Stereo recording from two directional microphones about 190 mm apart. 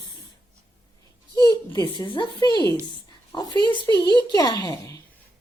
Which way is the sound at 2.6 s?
20° right (ahead or behind).